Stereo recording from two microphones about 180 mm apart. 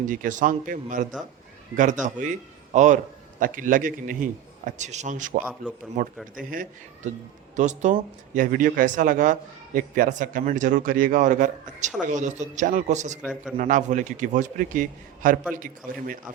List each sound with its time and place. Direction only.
0.0 s speech: 45° right (ahead or behind)